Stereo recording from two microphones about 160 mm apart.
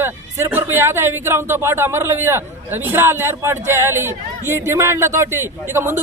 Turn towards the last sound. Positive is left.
turn(degrees=-15)  # may be behind; listen again after turning